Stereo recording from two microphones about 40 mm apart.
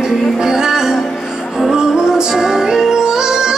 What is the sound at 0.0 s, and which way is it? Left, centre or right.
Music, centre.